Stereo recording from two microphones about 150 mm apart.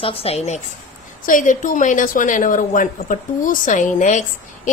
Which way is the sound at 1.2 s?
60° left (ahead or behind).